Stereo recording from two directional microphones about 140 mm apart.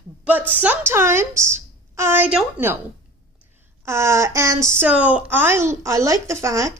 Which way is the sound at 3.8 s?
20° right (ahead or behind).